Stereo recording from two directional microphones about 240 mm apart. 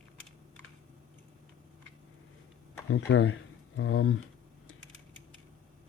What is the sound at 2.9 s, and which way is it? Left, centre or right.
Speech, left.